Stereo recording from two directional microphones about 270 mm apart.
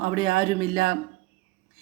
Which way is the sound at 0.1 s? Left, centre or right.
Centre.